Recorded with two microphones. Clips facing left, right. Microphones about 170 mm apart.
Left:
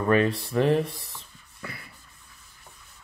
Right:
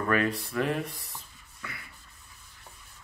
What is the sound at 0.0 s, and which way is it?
Speech, 25° left (ahead or behind).